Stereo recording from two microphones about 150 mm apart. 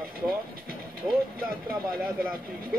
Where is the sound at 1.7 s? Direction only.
75° right (ahead or behind).